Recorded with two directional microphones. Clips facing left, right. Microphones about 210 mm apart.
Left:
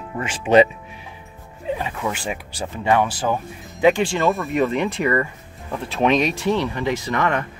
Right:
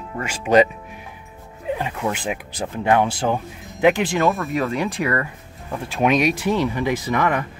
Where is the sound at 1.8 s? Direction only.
10° right (ahead or behind).